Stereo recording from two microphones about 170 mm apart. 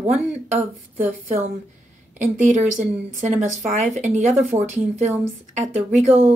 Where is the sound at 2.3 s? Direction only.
45° right (ahead or behind).